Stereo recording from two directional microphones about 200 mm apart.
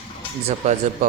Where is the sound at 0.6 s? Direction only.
35° right (ahead or behind).